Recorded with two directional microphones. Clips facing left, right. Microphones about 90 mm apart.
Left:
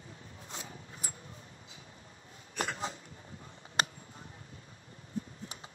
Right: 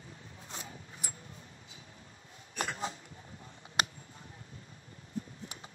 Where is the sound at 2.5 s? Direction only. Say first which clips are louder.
Even; 35° left (ahead or behind).